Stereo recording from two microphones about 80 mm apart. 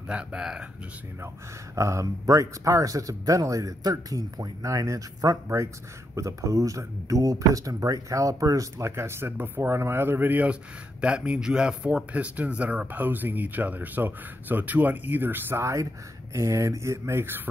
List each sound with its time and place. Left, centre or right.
0.1 s speech: centre
1.8 s speech: right